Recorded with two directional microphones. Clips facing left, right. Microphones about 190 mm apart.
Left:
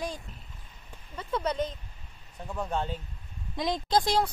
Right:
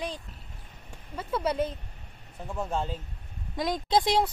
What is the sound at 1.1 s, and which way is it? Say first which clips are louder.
Speech: right 2 dB; 5° right (ahead or behind).